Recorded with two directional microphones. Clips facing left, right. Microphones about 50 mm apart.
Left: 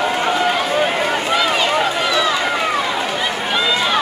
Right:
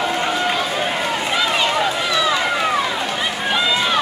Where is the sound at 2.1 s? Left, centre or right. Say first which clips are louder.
Right 1 dB; centre.